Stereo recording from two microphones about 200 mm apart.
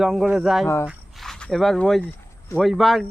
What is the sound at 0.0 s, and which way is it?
Speech, centre (ahead or behind).